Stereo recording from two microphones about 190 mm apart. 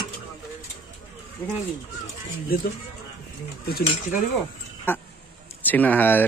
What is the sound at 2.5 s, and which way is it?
Speech, 50° left (ahead or behind).